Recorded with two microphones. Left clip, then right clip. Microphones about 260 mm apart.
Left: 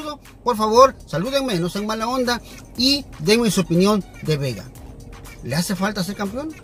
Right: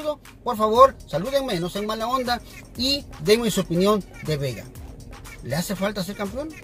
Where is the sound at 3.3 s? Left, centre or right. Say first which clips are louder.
Left 2 dB; centre.